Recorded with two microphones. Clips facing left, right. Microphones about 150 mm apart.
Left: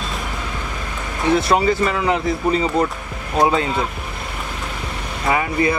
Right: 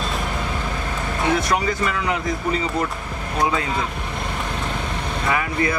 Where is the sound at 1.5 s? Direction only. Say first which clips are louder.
Left 5 dB; 30° left (ahead or behind).